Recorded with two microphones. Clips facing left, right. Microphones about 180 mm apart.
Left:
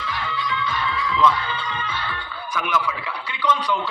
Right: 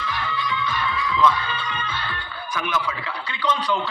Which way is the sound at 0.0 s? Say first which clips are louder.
Even; 20° left (ahead or behind).